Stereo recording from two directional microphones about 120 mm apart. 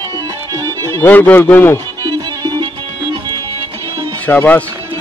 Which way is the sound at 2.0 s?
35° right (ahead or behind).